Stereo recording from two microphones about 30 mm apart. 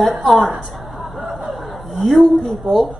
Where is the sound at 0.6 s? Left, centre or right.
Centre.